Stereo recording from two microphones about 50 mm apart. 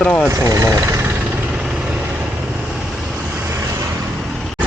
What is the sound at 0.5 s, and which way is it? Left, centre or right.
Speech, right.